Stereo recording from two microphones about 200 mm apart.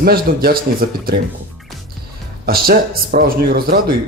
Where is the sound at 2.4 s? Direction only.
50° right (ahead or behind).